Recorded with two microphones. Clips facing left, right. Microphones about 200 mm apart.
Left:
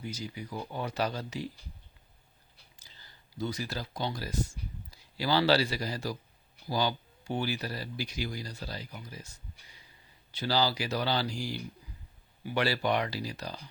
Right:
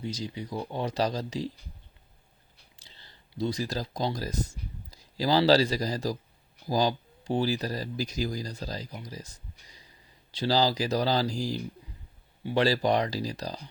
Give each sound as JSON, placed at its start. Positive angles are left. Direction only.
{"t": 0.0, "sound": "speech", "side_deg": -30}
{"t": 2.7, "sound": "speech", "side_deg": -30}